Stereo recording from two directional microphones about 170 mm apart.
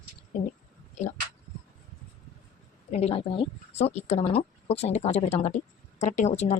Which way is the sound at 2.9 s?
40° left (ahead or behind).